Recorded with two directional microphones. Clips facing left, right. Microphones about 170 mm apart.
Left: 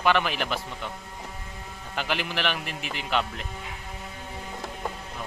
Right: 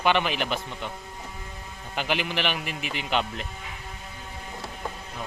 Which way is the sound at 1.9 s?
10° right (ahead or behind).